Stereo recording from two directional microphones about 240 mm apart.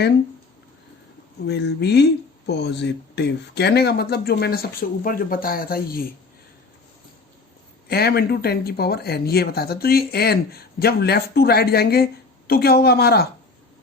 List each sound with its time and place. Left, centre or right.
1.5 s speech: left
7.9 s speech: left